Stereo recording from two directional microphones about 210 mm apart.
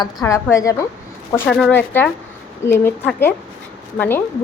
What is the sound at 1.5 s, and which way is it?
A woman's voice, centre (ahead or behind).